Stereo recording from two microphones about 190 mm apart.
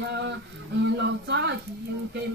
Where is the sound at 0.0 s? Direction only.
70° right (ahead or behind).